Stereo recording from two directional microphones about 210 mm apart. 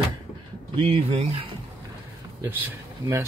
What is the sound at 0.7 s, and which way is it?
Speech, 25° right (ahead or behind).